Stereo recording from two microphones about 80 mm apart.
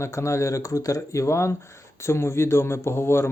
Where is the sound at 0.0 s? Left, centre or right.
Left.